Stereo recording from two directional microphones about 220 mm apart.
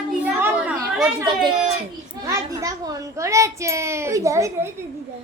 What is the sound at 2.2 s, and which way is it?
A child's voice, 15° right (ahead or behind).